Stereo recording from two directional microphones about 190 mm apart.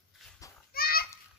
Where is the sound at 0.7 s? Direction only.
50° left (ahead or behind).